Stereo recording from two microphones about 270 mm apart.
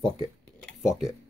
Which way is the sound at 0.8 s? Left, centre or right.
Centre.